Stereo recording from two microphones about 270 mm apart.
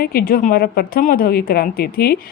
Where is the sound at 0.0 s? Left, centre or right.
Left.